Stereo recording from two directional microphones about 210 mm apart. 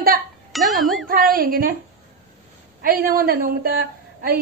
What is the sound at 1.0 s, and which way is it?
Speech, 45° right (ahead or behind).